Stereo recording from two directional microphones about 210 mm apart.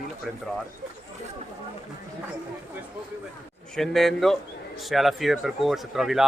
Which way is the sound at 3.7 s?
Centre (ahead or behind).